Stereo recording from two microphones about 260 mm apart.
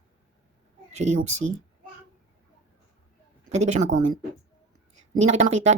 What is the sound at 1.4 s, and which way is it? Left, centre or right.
Speech, right.